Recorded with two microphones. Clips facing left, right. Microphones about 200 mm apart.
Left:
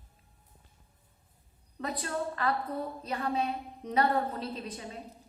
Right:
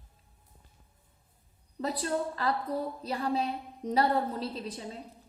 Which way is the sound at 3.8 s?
35° right (ahead or behind).